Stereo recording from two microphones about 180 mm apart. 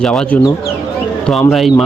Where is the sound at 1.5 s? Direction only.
Centre (ahead or behind).